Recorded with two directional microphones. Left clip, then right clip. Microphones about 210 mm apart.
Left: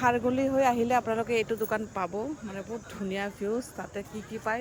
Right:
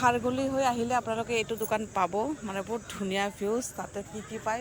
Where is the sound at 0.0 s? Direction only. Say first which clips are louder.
Even; 15° left (ahead or behind).